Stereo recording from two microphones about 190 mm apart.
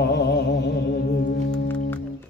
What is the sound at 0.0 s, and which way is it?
Music, 60° left (ahead or behind).